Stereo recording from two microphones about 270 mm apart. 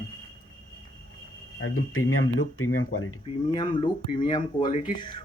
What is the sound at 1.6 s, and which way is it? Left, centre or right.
Speech, left.